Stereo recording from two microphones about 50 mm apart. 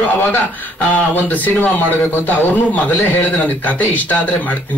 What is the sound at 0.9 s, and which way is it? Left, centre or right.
A man's voice, left.